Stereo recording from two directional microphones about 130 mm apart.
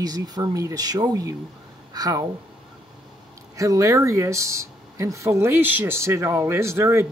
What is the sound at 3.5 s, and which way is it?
Speech, 25° right (ahead or behind).